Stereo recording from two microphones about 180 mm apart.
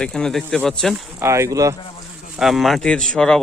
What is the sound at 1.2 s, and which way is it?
Speech, 15° right (ahead or behind).